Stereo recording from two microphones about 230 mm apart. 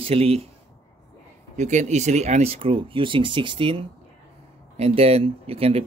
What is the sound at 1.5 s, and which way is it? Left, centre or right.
Speech, right.